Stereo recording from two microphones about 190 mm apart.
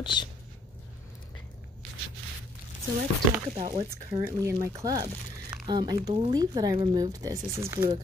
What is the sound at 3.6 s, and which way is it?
Speech, 30° right (ahead or behind).